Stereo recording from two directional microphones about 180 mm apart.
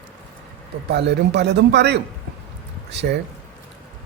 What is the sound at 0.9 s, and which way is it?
Speech, 70° right (ahead or behind).